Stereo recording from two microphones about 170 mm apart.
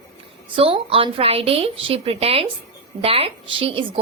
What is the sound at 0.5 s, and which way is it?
A woman's voice, 30° right (ahead or behind).